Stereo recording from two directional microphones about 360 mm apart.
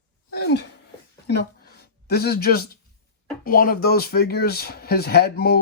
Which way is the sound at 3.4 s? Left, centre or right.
Left.